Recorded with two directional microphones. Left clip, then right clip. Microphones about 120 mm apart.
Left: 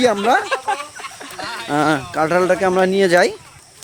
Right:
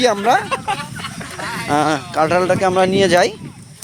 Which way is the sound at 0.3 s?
10° right (ahead or behind).